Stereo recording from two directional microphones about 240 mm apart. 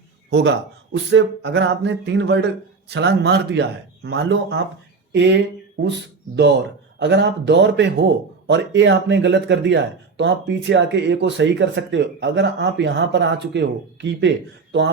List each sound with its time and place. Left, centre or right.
0.3 s a man's voice: right
5.8 s speech: right